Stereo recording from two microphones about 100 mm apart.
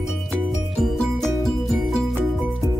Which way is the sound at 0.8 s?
Centre (ahead or behind).